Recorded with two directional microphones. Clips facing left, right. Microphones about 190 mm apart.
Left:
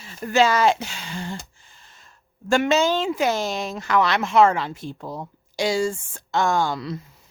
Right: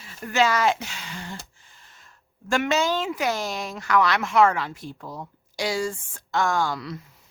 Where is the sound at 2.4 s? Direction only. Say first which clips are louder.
Left 4 dB; 30° left (ahead or behind).